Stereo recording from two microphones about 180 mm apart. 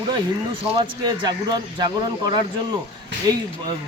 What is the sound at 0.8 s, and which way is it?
Speech, 25° right (ahead or behind).